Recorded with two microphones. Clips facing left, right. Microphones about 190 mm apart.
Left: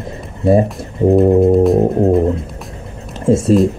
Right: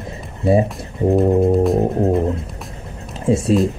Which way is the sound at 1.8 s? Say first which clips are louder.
Left 4 dB; 20° left (ahead or behind).